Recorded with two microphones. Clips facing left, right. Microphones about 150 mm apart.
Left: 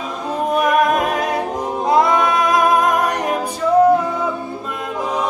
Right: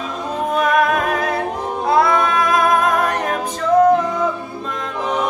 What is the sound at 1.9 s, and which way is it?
Singing, 15° left (ahead or behind).